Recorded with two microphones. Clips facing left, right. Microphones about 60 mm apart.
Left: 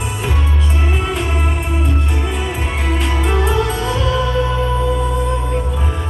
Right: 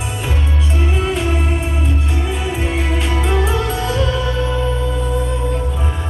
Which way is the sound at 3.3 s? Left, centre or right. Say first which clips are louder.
Left 2 dB; centre.